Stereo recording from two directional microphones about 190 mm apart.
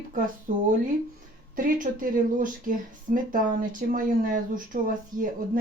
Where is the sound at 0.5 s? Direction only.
45° right (ahead or behind).